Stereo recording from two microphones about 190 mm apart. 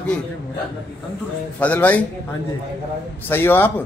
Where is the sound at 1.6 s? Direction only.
10° left (ahead or behind).